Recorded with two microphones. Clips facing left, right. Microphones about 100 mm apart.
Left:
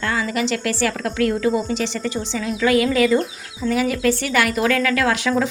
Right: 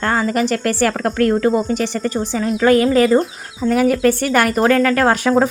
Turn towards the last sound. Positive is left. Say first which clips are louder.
# right 5 dB
turn(degrees=-45)  # may be behind; listen again after turning